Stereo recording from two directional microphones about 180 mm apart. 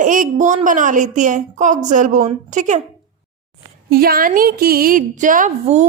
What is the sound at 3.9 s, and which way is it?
A woman's voice, 55° right (ahead or behind).